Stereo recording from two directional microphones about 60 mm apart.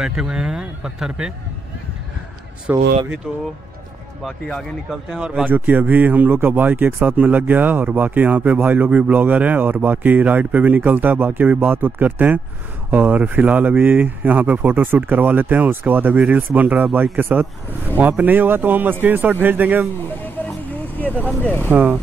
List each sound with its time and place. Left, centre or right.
0.0 s speech: centre
2.7 s speech: right
4.3 s speech: centre
5.2 s speech: right
20.2 s vehicle: left
21.7 s speech: right